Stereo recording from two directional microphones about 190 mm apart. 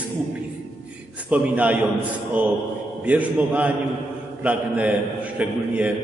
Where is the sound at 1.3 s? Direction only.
10° right (ahead or behind).